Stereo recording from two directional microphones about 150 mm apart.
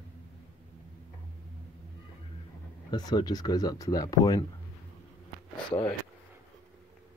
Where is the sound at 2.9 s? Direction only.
30° left (ahead or behind).